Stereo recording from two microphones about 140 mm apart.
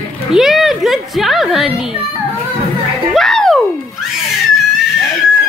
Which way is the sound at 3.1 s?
5° left (ahead or behind).